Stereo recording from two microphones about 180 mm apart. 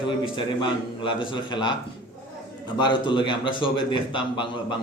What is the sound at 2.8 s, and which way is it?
A man's voice, 25° left (ahead or behind).